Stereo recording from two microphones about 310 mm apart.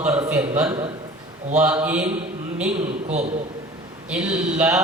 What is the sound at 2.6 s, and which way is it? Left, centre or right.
Speech, right.